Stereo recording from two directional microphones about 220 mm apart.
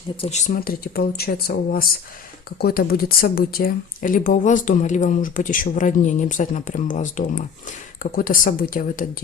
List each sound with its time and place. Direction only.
0.2 s speech: 30° left (ahead or behind)